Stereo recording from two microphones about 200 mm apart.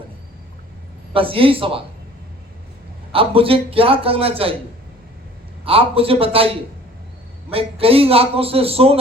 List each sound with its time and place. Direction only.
1.1 s a man's voice: 25° right (ahead or behind)
3.1 s a man's voice: 30° right (ahead or behind)
5.6 s a man's voice: 30° right (ahead or behind)